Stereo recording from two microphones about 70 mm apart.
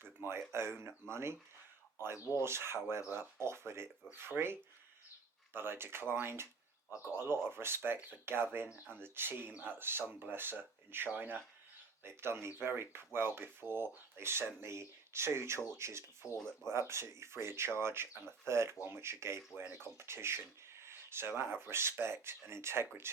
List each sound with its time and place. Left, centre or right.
0.0 s speech: right
2.1 s speech: left
2.4 s speech: right
5.5 s speech: right
16.4 s speech: centre
16.7 s speech: right